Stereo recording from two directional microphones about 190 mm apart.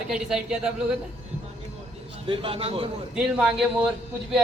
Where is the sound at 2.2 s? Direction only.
30° right (ahead or behind).